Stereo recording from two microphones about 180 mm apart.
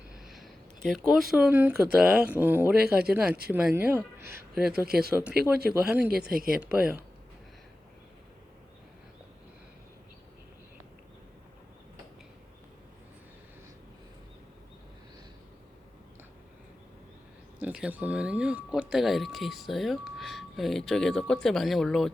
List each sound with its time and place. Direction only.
0.1 s speech: centre (ahead or behind)
4.9 s speech: 60° right (ahead or behind)
5.8 s speech: 5° right (ahead or behind)
6.1 s speech: 60° right (ahead or behind)
6.6 s speech: 5° right (ahead or behind)
17.6 s speech: 5° right (ahead or behind)